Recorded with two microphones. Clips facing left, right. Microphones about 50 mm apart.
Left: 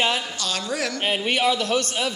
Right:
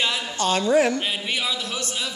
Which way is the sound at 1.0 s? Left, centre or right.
Left.